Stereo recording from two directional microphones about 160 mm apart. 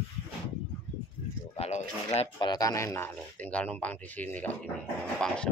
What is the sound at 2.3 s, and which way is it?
Speech, 25° left (ahead or behind).